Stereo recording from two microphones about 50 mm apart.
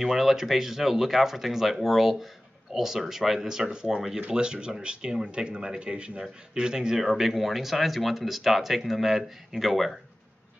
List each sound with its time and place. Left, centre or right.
0.0 s speech: centre